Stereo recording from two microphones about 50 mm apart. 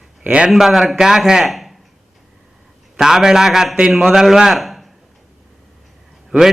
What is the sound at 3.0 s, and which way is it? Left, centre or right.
A man's voice, centre.